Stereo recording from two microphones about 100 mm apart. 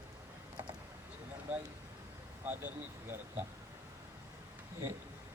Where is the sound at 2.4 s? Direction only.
20° right (ahead or behind).